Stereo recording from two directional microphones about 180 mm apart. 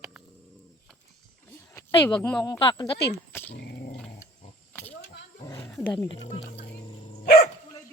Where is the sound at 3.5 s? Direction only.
65° left (ahead or behind).